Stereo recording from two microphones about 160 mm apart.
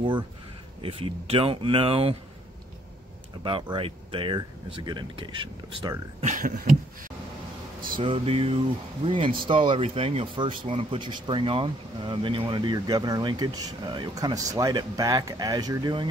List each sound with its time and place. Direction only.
0.8 s speech: 35° right (ahead or behind)
3.7 s speech: 35° right (ahead or behind)
6.2 s a sound: 55° right (ahead or behind)
7.8 s speech: 30° right (ahead or behind)